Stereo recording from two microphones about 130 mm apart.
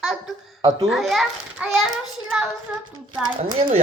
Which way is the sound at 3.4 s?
50° right (ahead or behind).